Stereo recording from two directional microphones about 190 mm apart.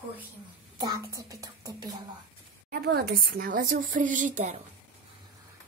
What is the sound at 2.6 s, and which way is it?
A woman's voice, 55° right (ahead or behind).